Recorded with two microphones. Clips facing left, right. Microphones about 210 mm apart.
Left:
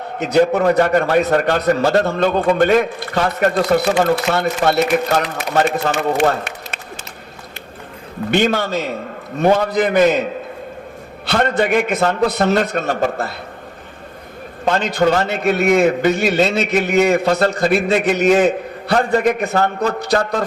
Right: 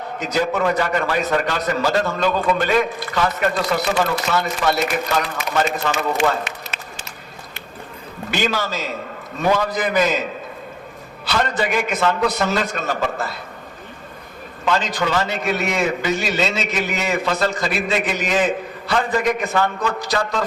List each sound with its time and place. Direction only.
0.2 s a man's voice: 65° left (ahead or behind)
0.5 s a man's voice: 40° left (ahead or behind)
0.8 s a man's voice: 55° left (ahead or behind)
2.6 s a man's voice: 45° left (ahead or behind)
4.0 s a man's voice: 60° left (ahead or behind)
8.3 s a man's voice: 55° left (ahead or behind)
11.3 s a man's voice: 55° left (ahead or behind)
14.6 s a man's voice: 50° left (ahead or behind)
20.0 s a man's voice: 55° left (ahead or behind)